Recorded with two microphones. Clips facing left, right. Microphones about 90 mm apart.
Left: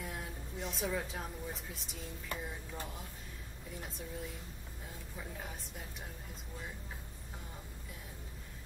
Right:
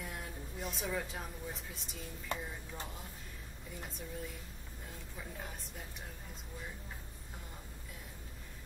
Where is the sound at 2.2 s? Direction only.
25° right (ahead or behind).